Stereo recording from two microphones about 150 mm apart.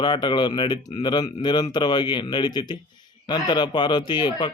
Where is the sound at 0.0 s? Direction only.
30° left (ahead or behind).